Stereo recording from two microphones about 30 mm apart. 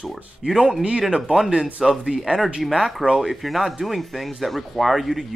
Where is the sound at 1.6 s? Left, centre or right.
Centre.